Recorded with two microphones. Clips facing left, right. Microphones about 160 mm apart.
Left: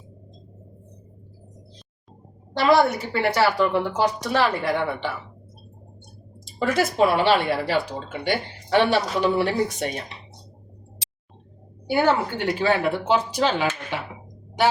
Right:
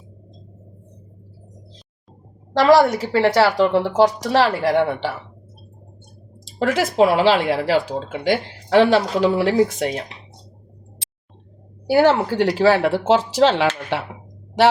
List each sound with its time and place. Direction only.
2.6 s speech: 90° right
6.6 s speech: 90° right
11.9 s speech: 90° right